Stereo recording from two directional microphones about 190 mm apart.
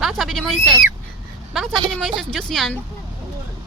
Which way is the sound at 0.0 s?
Centre (ahead or behind).